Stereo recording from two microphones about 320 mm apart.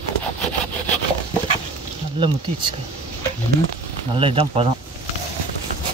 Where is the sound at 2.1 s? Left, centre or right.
Centre.